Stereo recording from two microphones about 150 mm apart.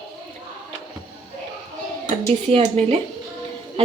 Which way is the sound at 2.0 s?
45° right (ahead or behind).